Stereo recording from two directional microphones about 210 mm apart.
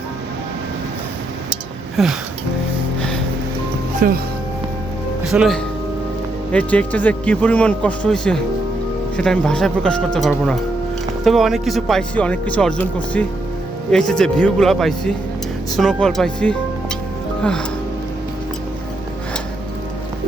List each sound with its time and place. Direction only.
2.0 s speech: centre (ahead or behind)
4.0 s speech: 40° right (ahead or behind)
5.3 s speech: 5° right (ahead or behind)